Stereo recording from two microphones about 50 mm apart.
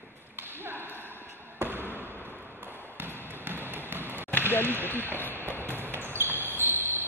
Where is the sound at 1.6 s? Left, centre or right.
Right.